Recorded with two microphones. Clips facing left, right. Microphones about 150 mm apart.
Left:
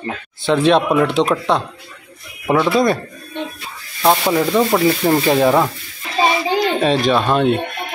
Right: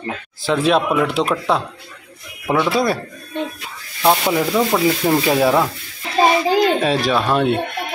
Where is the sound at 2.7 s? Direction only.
5° right (ahead or behind).